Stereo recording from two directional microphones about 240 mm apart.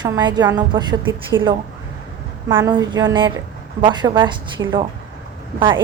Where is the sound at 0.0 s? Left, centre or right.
Centre.